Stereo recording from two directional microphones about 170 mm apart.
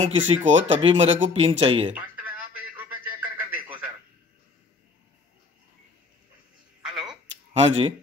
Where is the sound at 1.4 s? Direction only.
35° right (ahead or behind).